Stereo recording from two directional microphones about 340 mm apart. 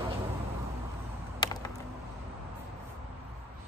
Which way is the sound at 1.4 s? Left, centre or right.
Centre.